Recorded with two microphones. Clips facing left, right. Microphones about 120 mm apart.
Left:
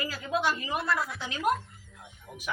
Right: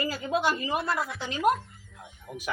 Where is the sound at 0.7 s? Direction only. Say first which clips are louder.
Right 1 dB; centre (ahead or behind).